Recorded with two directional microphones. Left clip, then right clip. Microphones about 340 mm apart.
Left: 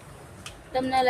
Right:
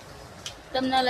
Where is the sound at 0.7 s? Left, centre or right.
Centre.